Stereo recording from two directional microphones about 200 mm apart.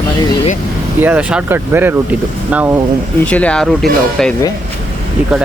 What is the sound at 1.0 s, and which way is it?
Speech, 10° right (ahead or behind).